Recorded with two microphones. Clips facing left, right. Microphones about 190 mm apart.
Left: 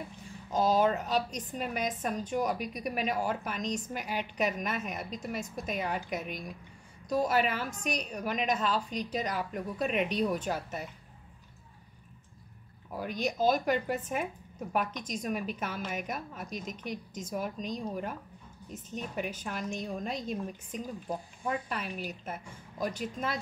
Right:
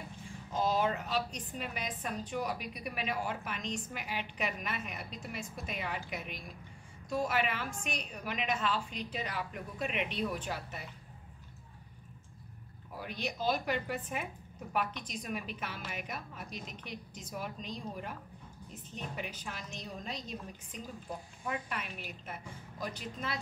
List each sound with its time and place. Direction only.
0.5 s a woman's voice: 40° left (ahead or behind)
13.0 s a woman's voice: 45° left (ahead or behind)
19.1 s a woman's voice: 50° left (ahead or behind)
21.5 s a woman's voice: 35° left (ahead or behind)